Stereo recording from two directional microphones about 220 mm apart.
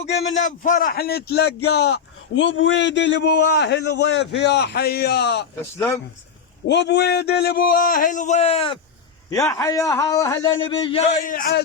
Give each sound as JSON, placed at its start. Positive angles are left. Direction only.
{"t": 0.3, "sound": "a man's voice", "side_deg": 35}
{"t": 5.7, "sound": "a man's voice", "side_deg": 10}
{"t": 6.7, "sound": "a man's voice", "side_deg": 50}
{"t": 9.3, "sound": "a man's voice", "side_deg": 15}